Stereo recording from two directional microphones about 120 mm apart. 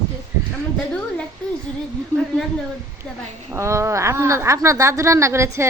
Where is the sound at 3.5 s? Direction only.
25° right (ahead or behind).